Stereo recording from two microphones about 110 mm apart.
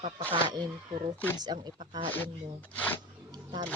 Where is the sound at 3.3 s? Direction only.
40° right (ahead or behind).